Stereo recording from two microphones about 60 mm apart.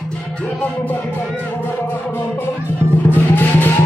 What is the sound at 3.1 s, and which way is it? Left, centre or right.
Music, left.